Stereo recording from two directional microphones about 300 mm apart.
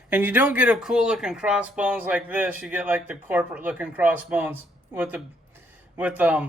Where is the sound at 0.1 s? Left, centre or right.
Centre.